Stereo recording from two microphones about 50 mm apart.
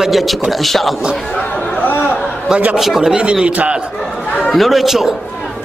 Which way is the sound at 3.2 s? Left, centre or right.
Centre.